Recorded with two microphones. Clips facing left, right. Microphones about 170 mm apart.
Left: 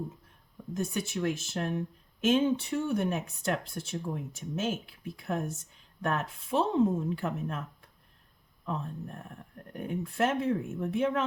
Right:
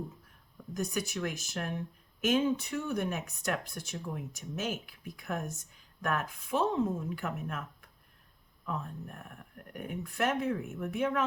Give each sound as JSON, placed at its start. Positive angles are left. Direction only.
{"t": 0.7, "sound": "speech", "side_deg": 25}